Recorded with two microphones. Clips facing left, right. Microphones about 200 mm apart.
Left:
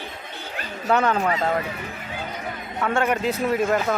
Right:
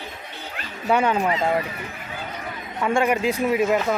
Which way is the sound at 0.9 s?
10° right (ahead or behind).